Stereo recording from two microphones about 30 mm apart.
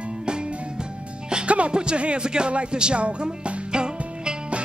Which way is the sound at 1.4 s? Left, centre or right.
Right.